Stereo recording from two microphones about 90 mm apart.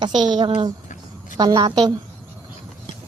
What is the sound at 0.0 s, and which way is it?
Speech, 55° right (ahead or behind).